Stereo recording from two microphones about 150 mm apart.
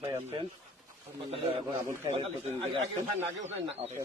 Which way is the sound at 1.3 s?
40° right (ahead or behind).